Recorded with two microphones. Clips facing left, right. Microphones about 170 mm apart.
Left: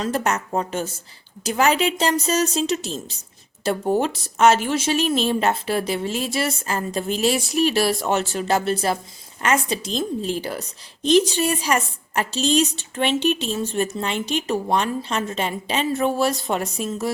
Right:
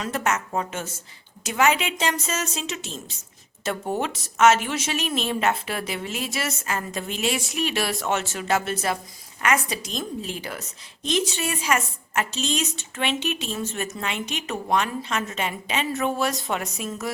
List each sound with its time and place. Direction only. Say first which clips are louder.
0.0 s a woman's voice: left 3 dB; 35° left (ahead or behind)